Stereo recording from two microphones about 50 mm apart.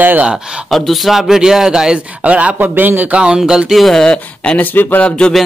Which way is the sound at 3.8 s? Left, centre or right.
Centre.